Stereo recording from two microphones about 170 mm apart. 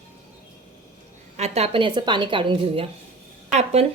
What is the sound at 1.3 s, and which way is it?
A woman's voice, 35° right (ahead or behind).